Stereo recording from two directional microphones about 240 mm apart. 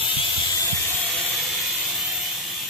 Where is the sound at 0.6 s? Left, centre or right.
Centre.